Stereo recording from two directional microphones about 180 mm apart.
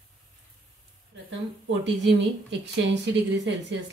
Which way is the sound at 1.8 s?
80° right.